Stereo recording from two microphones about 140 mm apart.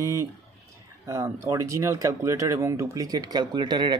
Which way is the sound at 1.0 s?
20° right (ahead or behind).